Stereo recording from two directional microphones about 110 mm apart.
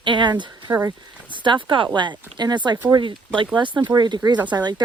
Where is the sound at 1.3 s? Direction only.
45° right (ahead or behind).